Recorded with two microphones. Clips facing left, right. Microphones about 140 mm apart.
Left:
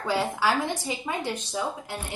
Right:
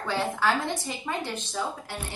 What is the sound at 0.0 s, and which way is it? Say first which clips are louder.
Speech: left 1 dB; 10° left (ahead or behind).